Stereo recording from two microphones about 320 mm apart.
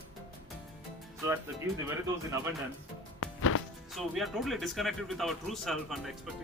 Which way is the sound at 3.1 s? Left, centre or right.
Left.